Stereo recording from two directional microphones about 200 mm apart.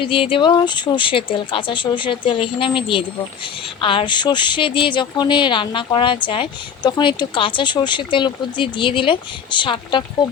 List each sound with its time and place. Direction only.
0.0 s speech: 25° left (ahead or behind)